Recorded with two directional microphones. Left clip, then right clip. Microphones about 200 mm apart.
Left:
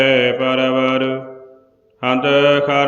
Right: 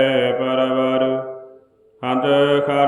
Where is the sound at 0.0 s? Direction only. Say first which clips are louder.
Left 3 dB; 15° left (ahead or behind).